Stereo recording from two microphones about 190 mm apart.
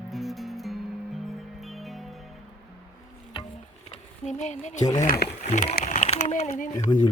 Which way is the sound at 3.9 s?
40° left (ahead or behind).